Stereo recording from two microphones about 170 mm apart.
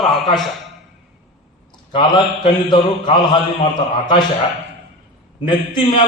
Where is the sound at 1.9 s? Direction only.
25° left (ahead or behind).